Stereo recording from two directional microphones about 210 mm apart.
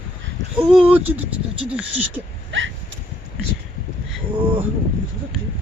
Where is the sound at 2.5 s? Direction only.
65° right (ahead or behind).